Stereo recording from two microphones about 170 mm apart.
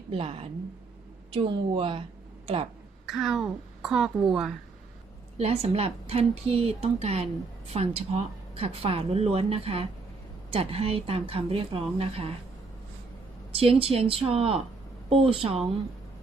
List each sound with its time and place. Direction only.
0.1 s speech: 35° right (ahead or behind)
3.1 s a woman's voice: centre (ahead or behind)
5.4 s speech: 40° right (ahead or behind)
13.5 s speech: 35° right (ahead or behind)